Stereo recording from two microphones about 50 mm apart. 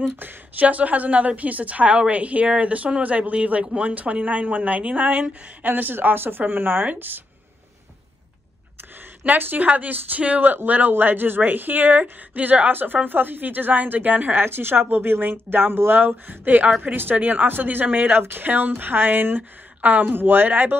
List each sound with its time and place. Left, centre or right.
0.2 s a woman's voice: right
5.6 s speech: right
9.2 s speech: right
14.4 s speech: right